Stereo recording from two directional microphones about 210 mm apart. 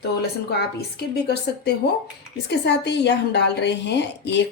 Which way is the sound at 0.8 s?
50° left (ahead or behind).